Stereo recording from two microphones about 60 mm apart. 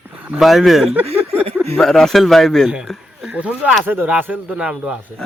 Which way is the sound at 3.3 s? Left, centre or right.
Right.